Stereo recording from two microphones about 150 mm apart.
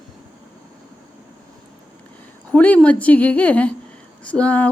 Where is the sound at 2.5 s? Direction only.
10° left (ahead or behind).